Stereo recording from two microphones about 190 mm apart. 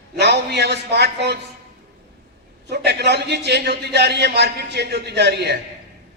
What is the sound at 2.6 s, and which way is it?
A man's voice, 60° right (ahead or behind).